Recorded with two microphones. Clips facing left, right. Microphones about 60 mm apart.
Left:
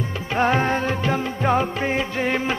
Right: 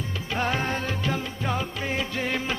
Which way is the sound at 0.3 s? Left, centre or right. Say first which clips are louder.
Left 7 dB; left.